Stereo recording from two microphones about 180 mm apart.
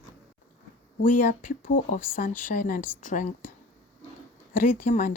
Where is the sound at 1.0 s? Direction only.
45° left (ahead or behind).